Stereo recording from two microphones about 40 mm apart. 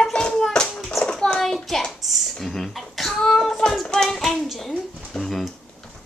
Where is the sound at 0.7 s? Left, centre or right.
Centre.